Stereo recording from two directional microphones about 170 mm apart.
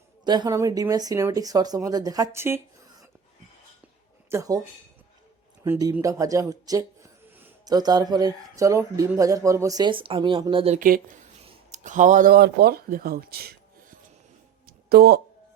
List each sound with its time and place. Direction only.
0.3 s speech: 25° right (ahead or behind)
4.3 s speech: 20° right (ahead or behind)
5.6 s speech: 15° right (ahead or behind); by 10.8 s 30° right (ahead or behind)
10.8 s speech: 55° right (ahead or behind)
11.4 s speech: 45° right (ahead or behind); by 13.6 s 65° right (ahead or behind)
14.7 s a sound: 65° right (ahead or behind)